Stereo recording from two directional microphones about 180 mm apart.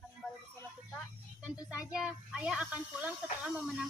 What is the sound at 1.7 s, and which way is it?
A child's voice, 5° right (ahead or behind).